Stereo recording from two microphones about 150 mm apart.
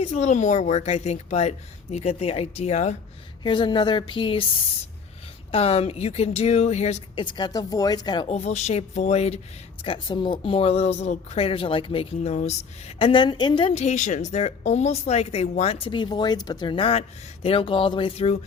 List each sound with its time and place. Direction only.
0.0 s speech: 50° left (ahead or behind)
3.4 s speech: 30° left (ahead or behind)
5.5 s speech: 40° left (ahead or behind)
7.2 s speech: 30° left (ahead or behind)
8.3 s speech: 45° left (ahead or behind)
9.8 s speech: 35° left (ahead or behind)
13.7 s speech: 50° left (ahead or behind)